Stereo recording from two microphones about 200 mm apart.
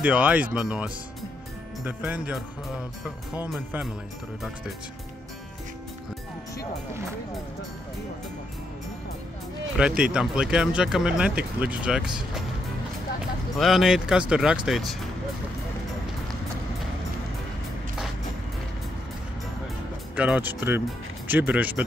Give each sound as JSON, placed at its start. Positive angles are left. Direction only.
{"t": 0.0, "sound": "speech", "side_deg": -5}
{"t": 9.8, "sound": "speech", "side_deg": -5}
{"t": 13.6, "sound": "speech", "side_deg": 0}
{"t": 20.2, "sound": "speech", "side_deg": -5}